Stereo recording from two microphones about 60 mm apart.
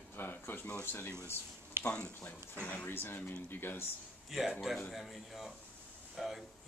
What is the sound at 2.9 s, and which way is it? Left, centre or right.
Speech, left.